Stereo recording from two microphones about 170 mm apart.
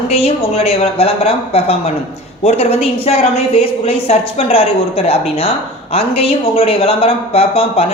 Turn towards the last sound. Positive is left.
turn(degrees=35)  # may be behind; listen again after turning